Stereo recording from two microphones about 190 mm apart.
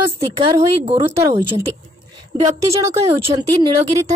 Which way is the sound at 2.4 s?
15° right (ahead or behind).